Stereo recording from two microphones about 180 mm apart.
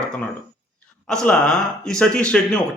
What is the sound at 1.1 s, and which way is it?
A man's voice, 5° left (ahead or behind).